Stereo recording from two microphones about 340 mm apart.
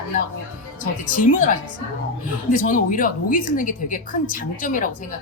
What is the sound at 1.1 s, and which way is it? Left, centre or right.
Speech, left.